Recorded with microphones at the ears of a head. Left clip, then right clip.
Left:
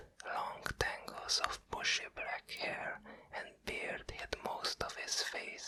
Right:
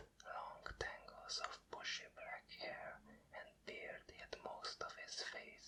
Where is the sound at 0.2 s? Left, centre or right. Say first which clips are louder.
Left 11 dB; left.